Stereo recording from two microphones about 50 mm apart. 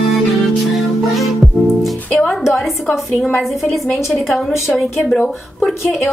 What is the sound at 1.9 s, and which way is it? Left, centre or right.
Music, left.